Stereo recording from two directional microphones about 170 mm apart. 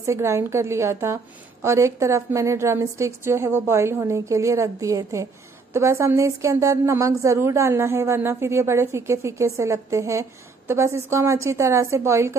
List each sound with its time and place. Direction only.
0.0 s a woman's voice: 15° right (ahead or behind)